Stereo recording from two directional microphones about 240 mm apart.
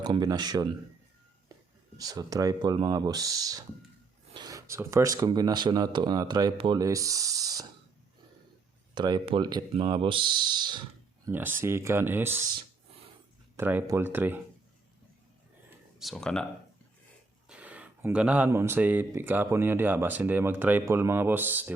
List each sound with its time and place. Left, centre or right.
0.0 s speech: centre
2.0 s speech: centre
9.0 s speech: centre
13.6 s speech: centre
16.0 s speech: centre
17.5 s speech: centre